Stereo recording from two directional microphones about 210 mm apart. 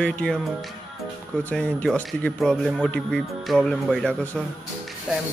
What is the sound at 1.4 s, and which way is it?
Speech, 5° left (ahead or behind).